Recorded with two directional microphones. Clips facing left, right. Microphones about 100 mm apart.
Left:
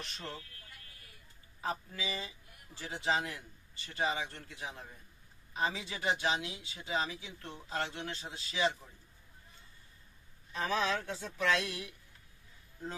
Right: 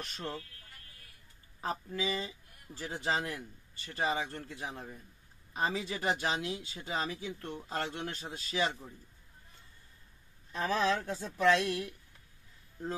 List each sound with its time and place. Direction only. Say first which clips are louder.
0.0 s a man's voice: right 4 dB; 40° right (ahead or behind)
1.6 s a man's voice: right 3 dB; 40° right (ahead or behind)
10.8 s a man's voice: right 3 dB; 40° right (ahead or behind)